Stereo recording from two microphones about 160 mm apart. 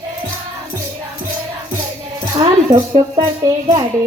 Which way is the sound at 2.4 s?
30° right (ahead or behind).